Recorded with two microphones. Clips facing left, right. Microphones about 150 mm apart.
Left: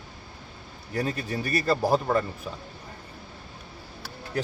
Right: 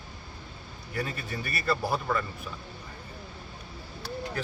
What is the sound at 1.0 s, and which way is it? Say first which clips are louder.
A man's voice: left 5 dB; 40° left (ahead or behind).